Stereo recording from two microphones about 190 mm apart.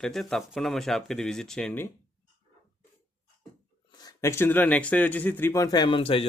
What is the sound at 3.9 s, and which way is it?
Speech, 20° left (ahead or behind).